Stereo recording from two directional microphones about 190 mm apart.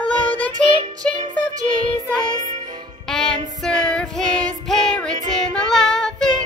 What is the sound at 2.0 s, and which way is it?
Music, 40° right (ahead or behind).